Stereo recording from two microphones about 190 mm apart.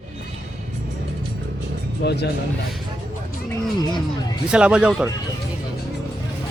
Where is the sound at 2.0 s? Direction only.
60° left (ahead or behind).